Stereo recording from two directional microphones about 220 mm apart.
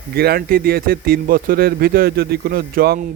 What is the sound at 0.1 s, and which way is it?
Speech, 45° right (ahead or behind).